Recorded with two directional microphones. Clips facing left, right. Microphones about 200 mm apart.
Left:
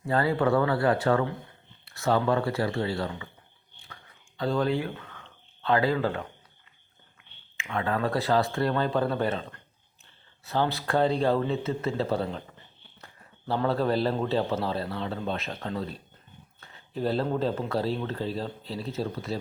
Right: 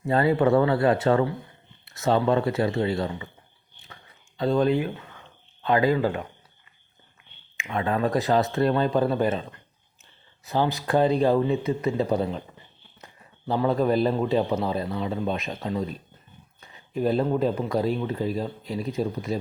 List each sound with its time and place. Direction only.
0.0 s speech: 20° right (ahead or behind)
4.4 s speech: 20° right (ahead or behind)
7.5 s a man's voice: 15° right (ahead or behind)
13.5 s a man's voice: 15° right (ahead or behind)
16.6 s a sound: 15° right (ahead or behind)
17.2 s a man's voice: 10° right (ahead or behind)